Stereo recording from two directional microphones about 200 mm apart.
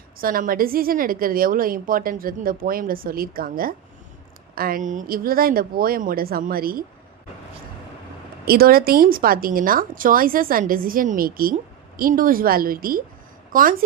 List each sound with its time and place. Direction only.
0.2 s a woman's voice: 45° right (ahead or behind)
8.4 s a woman's voice: 50° right (ahead or behind)